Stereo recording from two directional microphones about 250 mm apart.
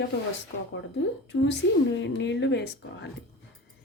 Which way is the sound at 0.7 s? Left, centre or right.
Left.